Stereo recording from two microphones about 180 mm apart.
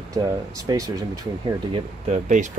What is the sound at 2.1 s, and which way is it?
Speech, 40° right (ahead or behind).